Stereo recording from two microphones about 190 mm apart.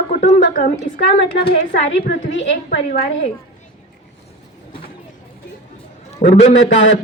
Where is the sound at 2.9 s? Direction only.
50° left (ahead or behind).